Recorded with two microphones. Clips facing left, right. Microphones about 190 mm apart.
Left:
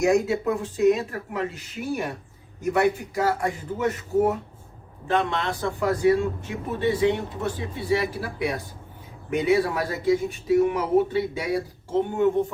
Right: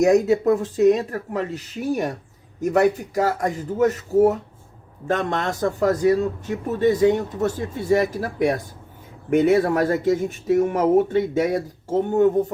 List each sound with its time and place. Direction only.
0.0 s a man's voice: 40° right (ahead or behind)